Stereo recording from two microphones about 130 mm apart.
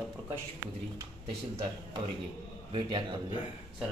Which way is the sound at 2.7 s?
40° right (ahead or behind).